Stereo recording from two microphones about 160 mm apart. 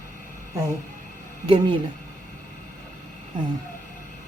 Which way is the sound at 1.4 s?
30° right (ahead or behind).